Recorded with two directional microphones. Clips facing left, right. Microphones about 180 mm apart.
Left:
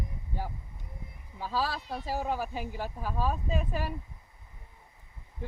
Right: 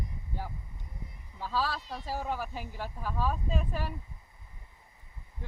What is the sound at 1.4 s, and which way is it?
Speech, 15° left (ahead or behind).